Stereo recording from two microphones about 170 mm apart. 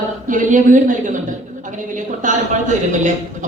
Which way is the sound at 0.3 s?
50° right (ahead or behind).